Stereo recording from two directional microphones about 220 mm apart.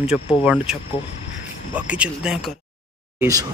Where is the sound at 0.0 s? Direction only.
5° right (ahead or behind).